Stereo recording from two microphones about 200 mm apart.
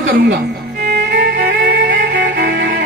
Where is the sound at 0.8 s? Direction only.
50° right (ahead or behind).